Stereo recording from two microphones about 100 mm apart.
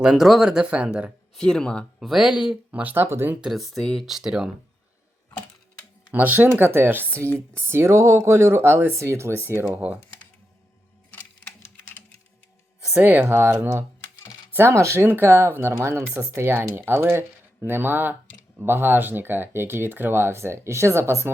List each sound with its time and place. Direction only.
0.0 s speech: 5° right (ahead or behind)
1.4 s speech: 5° left (ahead or behind)
2.0 s speech: 5° right (ahead or behind)
2.8 s speech: 20° right (ahead or behind)
3.4 s speech: centre (ahead or behind)
6.1 s speech: 15° right (ahead or behind)
9.6 s speech: 15° right (ahead or behind)
11.1 s typewriter: 20° left (ahead or behind)
12.9 s speech: 15° right (ahead or behind)